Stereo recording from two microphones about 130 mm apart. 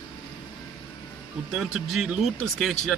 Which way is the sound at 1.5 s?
5° right (ahead or behind).